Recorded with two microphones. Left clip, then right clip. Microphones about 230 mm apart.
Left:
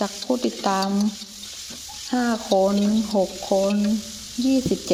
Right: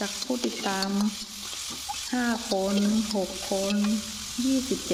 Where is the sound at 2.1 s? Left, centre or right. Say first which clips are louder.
Left 8 dB; centre.